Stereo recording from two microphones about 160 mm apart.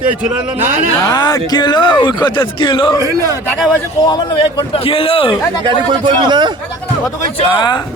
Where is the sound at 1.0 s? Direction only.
20° left (ahead or behind).